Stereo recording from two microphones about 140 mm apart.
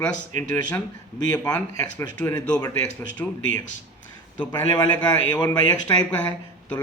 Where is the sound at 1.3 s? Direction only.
25° left (ahead or behind).